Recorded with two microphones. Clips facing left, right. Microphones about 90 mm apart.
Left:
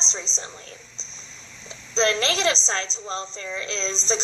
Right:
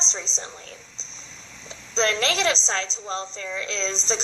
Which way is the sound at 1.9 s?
25° left (ahead or behind).